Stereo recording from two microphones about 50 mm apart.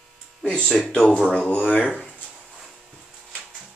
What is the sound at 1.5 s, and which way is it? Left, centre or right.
Speech, left.